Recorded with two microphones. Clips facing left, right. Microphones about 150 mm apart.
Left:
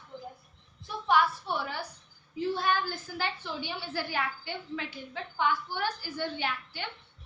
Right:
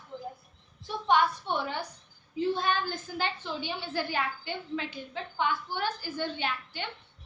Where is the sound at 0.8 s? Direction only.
25° right (ahead or behind).